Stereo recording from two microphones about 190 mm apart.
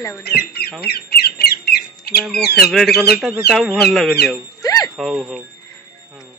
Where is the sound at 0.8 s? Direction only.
55° left (ahead or behind).